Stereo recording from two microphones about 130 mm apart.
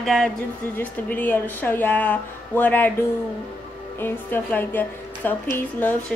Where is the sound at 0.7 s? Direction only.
15° left (ahead or behind).